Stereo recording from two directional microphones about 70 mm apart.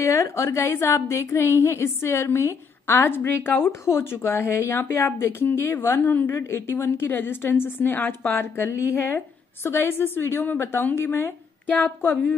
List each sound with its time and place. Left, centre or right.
0.0 s a woman's voice: left